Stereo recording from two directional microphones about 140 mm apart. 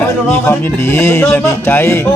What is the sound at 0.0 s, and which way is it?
Speech, 15° left (ahead or behind).